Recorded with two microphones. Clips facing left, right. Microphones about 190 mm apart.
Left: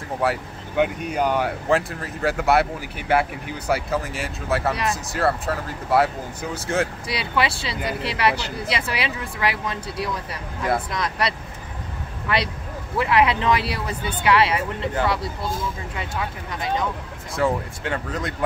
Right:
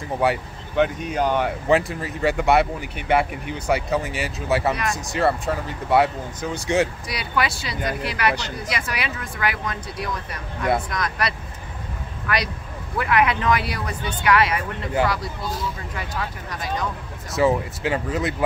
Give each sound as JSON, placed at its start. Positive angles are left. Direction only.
{"t": 0.2, "sound": "speech", "side_deg": 5}
{"t": 7.1, "sound": "speech", "side_deg": 30}
{"t": 16.0, "sound": "speech", "side_deg": 25}
{"t": 17.3, "sound": "speech", "side_deg": -5}